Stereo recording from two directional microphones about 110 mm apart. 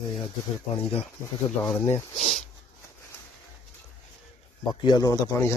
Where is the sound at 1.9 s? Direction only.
90° left.